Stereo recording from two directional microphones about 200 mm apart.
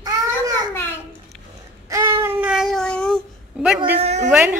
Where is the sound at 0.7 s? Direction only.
10° left (ahead or behind).